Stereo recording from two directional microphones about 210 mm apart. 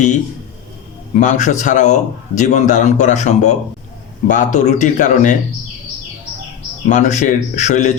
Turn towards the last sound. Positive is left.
turn(degrees=35)  # may be behind; listen again after turning